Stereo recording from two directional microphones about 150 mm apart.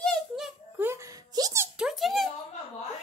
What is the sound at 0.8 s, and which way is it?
Plop, 20° right (ahead or behind).